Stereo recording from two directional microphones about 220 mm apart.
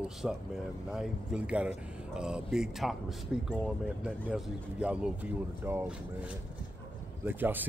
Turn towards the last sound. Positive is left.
turn(degrees=-10)  # may be behind; listen again after turning